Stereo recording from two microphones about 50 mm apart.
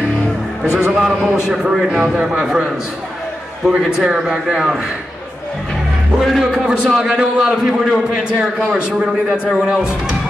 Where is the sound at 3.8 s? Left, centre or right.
Centre.